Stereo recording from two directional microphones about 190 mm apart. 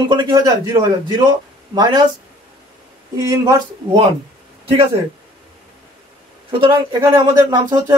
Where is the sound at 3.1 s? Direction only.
20° right (ahead or behind).